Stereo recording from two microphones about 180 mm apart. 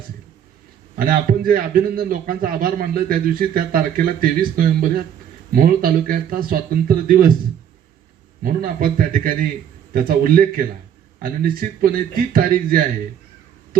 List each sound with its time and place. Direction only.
0.9 s a man's voice: 55° right (ahead or behind)
8.4 s a man's voice: 50° right (ahead or behind)